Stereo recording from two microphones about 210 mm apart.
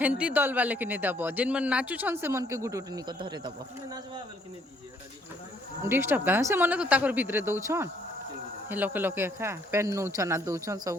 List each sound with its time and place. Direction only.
0.0 s speech: 5° right (ahead or behind)
5.8 s speech: 10° right (ahead or behind)